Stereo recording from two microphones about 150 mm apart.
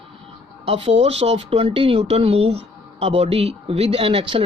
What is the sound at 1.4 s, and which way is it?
Speech, 40° right (ahead or behind).